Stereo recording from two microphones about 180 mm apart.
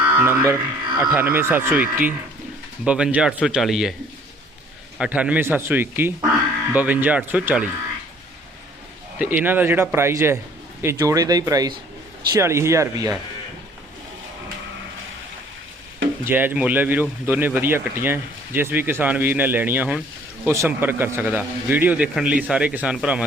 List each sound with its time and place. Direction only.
0.0 s speech: 10° right (ahead or behind)
4.9 s speech: 5° right (ahead or behind)
9.1 s speech: 10° right (ahead or behind)
16.2 s speech: 10° right (ahead or behind)